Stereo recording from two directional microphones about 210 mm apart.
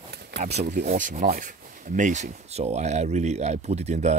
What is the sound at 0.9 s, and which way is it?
Speech, 40° right (ahead or behind).